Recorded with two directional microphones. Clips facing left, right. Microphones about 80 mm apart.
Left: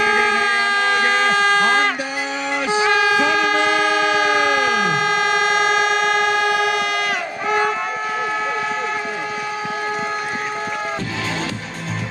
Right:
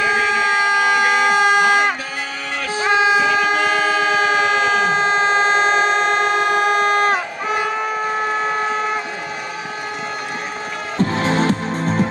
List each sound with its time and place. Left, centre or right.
0.0 s a sound: centre
2.9 s music: right
4.2 s vehicle: right
11.0 s music: right